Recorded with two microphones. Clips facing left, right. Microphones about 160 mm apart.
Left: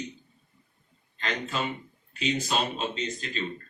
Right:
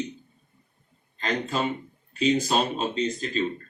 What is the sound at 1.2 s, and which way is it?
Speech, 40° right (ahead or behind).